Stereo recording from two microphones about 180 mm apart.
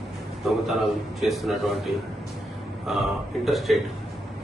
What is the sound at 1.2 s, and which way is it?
A man's voice, centre (ahead or behind).